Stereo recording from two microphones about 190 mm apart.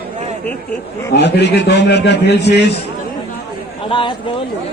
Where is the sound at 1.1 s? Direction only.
60° left (ahead or behind).